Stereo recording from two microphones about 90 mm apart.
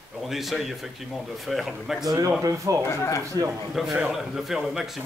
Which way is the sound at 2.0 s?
45° right (ahead or behind).